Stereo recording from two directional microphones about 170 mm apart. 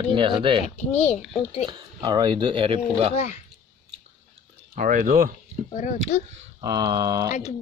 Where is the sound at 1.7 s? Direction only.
25° right (ahead or behind).